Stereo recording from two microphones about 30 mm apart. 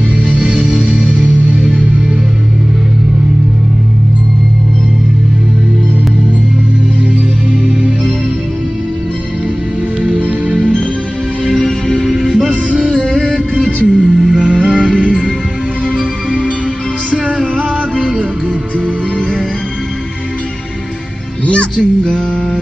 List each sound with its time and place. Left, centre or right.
0.4 s music: right
1.7 s music: right
11.5 s music: centre
12.1 s music: centre
12.8 s music: left
13.8 s music: right
14.4 s music: right
14.8 s music: left
17.9 s music: right
21.7 s music: left